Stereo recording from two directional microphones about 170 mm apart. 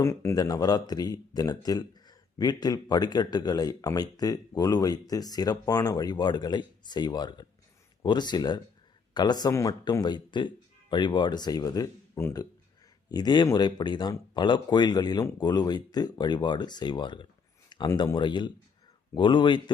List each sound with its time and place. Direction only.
0.0 s speech: 15° left (ahead or behind)